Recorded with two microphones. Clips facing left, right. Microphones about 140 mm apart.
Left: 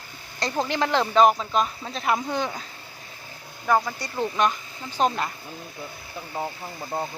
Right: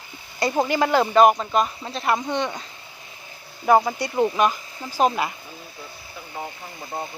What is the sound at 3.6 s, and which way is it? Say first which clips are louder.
Speech: right 5 dB; 25° right (ahead or behind).